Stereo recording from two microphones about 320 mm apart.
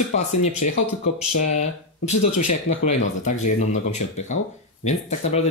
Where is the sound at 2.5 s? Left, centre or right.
Left.